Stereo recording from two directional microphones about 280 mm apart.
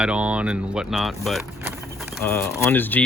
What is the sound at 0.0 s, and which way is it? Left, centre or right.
Speech, centre.